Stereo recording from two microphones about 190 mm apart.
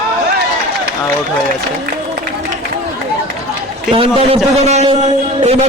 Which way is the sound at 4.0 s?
30° right (ahead or behind).